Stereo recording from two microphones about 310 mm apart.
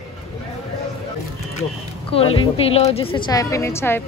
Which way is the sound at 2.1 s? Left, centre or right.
Centre.